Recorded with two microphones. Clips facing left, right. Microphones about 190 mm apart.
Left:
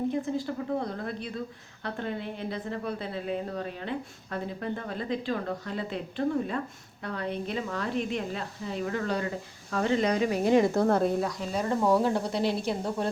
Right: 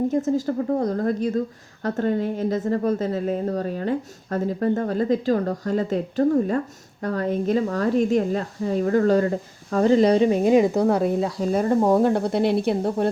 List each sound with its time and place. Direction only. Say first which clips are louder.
0.1 s a woman's voice: right 8 dB; 45° right (ahead or behind); by 11.1 s 10° right (ahead or behind)
11.1 s speech: right 5 dB; 20° right (ahead or behind)
11.3 s speech: right 8 dB; 45° right (ahead or behind)